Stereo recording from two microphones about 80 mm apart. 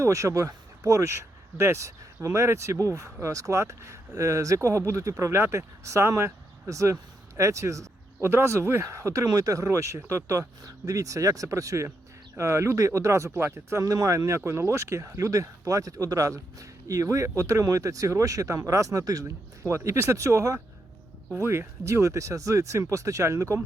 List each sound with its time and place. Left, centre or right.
0.0 s speech: right